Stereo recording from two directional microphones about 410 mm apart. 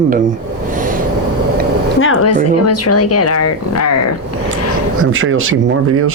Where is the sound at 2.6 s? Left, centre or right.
Left.